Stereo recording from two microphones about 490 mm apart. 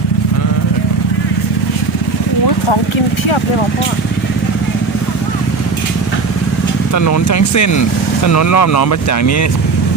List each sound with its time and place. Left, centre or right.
6.9 s speech: left